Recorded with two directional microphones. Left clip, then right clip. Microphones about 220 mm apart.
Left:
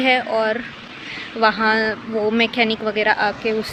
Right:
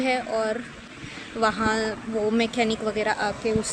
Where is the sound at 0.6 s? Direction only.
50° right (ahead or behind).